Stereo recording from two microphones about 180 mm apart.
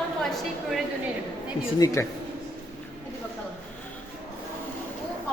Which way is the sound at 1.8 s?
15° left (ahead or behind).